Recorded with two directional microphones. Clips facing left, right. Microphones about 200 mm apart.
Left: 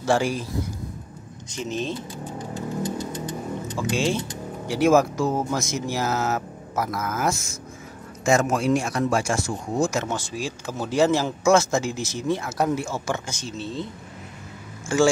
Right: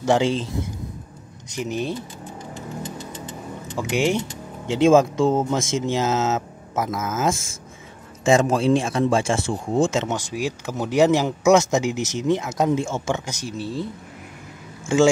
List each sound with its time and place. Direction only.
0.0 s speech: 20° right (ahead or behind)
1.5 s speech: 15° right (ahead or behind)
3.7 s speech: 20° right (ahead or behind)